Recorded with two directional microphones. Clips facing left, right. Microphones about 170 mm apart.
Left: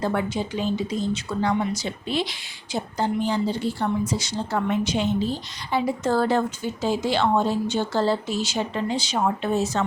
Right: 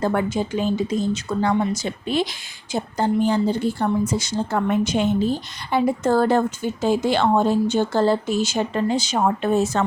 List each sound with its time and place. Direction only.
0.0 s speech: 50° right (ahead or behind)